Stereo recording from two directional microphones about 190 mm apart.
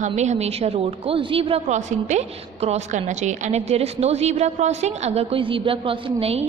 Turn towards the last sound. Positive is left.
turn(degrees=-30)  # may be behind; listen again after turning